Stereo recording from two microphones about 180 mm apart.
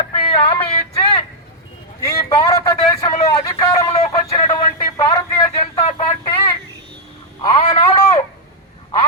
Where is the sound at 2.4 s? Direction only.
20° left (ahead or behind).